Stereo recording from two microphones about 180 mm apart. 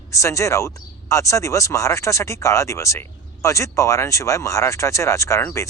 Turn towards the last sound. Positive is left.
turn(degrees=15)  # may be behind; listen again after turning